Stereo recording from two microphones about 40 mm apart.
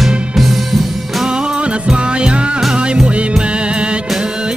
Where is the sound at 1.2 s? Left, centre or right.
Right.